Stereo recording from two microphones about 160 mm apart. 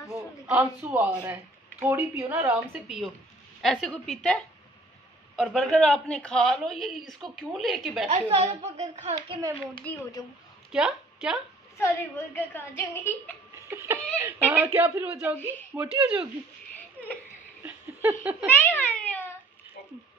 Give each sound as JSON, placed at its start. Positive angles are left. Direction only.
{"t": 0.5, "sound": "a woman's voice", "side_deg": -10}
{"t": 8.1, "sound": "a woman's voice", "side_deg": -45}
{"t": 9.9, "sound": "a woman's voice", "side_deg": 10}
{"t": 10.7, "sound": "a woman's voice", "side_deg": -5}
{"t": 11.8, "sound": "a woman's voice", "side_deg": 15}
{"t": 13.7, "sound": "speech", "side_deg": -15}
{"t": 17.6, "sound": "laughter", "side_deg": -10}
{"t": 18.5, "sound": "cat", "side_deg": 10}